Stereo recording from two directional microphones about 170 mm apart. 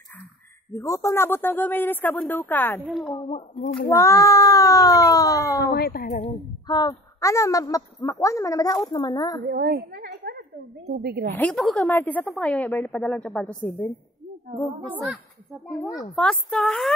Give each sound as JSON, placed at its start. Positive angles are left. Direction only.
{"t": 0.7, "sound": "a woman's voice", "side_deg": 15}
{"t": 3.1, "sound": "speech", "side_deg": 25}
{"t": 5.6, "sound": "speech", "side_deg": 70}
{"t": 6.7, "sound": "speech", "side_deg": 25}
{"t": 9.5, "sound": "a sound", "side_deg": -60}
{"t": 10.9, "sound": "speech", "side_deg": -70}
{"t": 11.3, "sound": "a woman's voice", "side_deg": 5}
{"t": 14.9, "sound": "a woman's voice", "side_deg": -10}
{"t": 16.2, "sound": "speech", "side_deg": 5}